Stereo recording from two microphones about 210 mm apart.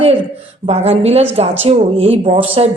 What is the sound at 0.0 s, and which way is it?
Speech, 25° right (ahead or behind).